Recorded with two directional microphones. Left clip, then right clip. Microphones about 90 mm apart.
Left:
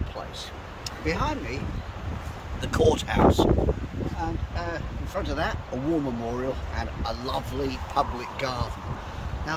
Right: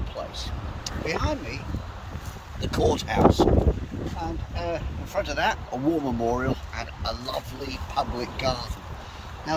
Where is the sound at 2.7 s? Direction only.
25° left (ahead or behind).